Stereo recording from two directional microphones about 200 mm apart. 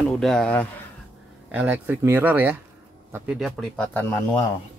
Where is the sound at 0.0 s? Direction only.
5° left (ahead or behind).